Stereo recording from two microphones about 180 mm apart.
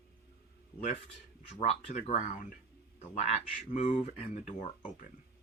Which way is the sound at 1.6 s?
40° left (ahead or behind).